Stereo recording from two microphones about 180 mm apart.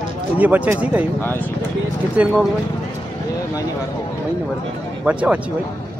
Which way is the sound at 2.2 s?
10° right (ahead or behind).